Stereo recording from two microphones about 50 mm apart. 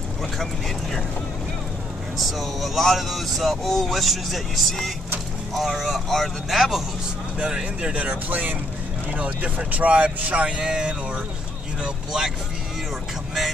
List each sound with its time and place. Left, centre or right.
2.1 s speech: centre
7.3 s speech: centre
7.9 s speech: right